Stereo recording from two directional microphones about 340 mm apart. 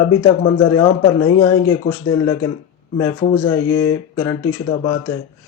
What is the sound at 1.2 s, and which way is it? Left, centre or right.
Speech, left.